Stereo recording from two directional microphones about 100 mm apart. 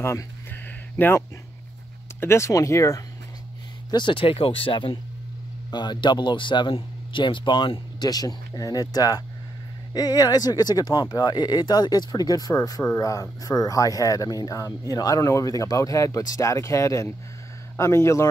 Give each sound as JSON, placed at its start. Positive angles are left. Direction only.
{"t": 0.0, "sound": "a sound", "side_deg": 20}
{"t": 2.1, "sound": "speech", "side_deg": 25}
{"t": 3.9, "sound": "speech", "side_deg": 55}
{"t": 5.7, "sound": "speech", "side_deg": 50}